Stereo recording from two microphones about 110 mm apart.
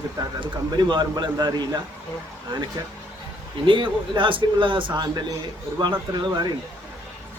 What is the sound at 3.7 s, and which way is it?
Speech, 50° right (ahead or behind).